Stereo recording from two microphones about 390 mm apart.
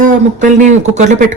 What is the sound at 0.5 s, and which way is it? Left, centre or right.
Speech, centre.